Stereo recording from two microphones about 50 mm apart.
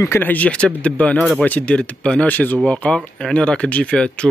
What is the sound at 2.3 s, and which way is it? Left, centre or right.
Speech, left.